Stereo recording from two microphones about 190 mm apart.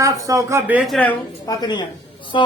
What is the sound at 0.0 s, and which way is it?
Speech, 15° right (ahead or behind).